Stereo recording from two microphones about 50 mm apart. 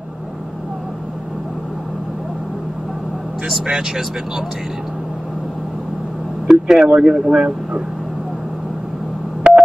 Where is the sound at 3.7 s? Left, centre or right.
Centre.